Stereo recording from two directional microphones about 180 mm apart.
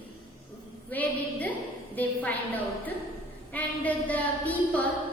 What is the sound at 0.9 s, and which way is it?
Music, 10° left (ahead or behind).